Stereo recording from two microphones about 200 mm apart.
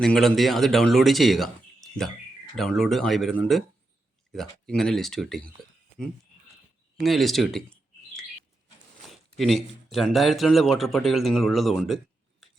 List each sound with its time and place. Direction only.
0.0 s speech: centre (ahead or behind)
7.0 s a sound: centre (ahead or behind)
9.0 s speech: centre (ahead or behind)